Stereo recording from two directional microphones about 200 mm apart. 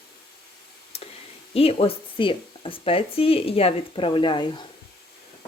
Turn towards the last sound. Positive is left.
turn(degrees=25)  # may be behind; listen again after turning